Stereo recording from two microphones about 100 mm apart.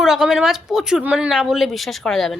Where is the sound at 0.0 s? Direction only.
5° right (ahead or behind).